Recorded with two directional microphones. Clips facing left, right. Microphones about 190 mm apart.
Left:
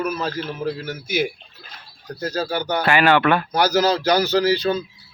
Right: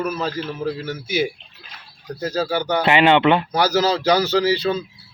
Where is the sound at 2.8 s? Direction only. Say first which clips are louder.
Right 2 dB; 20° right (ahead or behind).